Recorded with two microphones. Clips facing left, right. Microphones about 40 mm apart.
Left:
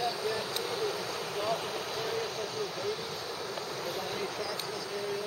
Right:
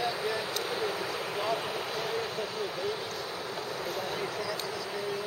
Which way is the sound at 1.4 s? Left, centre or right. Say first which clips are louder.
Right 1 dB; centre.